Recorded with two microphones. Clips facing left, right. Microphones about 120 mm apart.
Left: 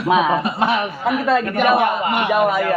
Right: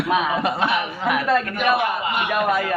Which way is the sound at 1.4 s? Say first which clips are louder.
Left 5 dB; 55° left (ahead or behind).